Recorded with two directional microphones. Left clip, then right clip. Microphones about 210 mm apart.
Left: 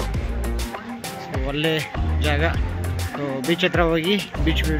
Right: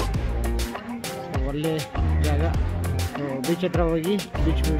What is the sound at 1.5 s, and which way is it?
Speech, centre (ahead or behind).